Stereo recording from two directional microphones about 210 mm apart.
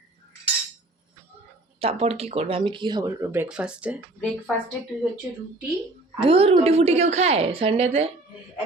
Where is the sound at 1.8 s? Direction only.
30° right (ahead or behind); by 3.9 s 5° right (ahead or behind).